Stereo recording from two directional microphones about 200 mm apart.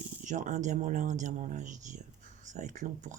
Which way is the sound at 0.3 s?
40° right (ahead or behind).